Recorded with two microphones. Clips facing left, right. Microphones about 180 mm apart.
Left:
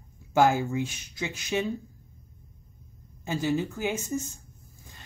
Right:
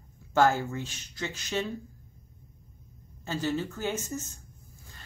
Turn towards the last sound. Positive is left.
turn(degrees=15)  # may be behind; listen again after turning